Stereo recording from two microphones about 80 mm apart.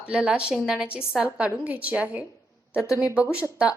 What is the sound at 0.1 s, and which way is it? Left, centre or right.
A woman's voice, centre.